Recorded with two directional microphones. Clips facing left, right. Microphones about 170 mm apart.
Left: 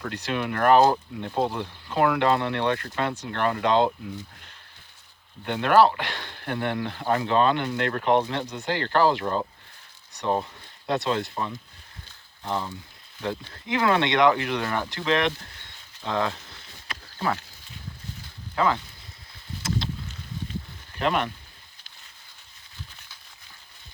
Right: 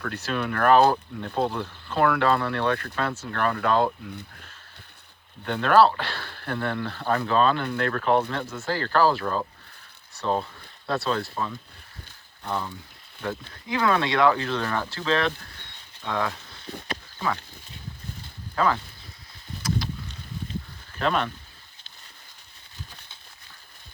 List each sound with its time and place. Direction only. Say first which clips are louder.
0.0 s speech: even; 15° left (ahead or behind)
5.5 s speech: even; 15° left (ahead or behind)
18.5 s speech: even; 15° left (ahead or behind)
19.6 s a sound: right 1 dB; 25° left (ahead or behind)
21.0 s speech: even; 15° left (ahead or behind)